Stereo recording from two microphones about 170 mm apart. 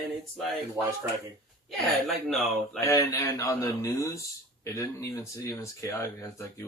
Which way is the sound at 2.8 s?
20° left (ahead or behind).